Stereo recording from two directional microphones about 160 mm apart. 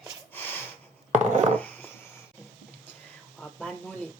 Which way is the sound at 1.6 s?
10° left (ahead or behind).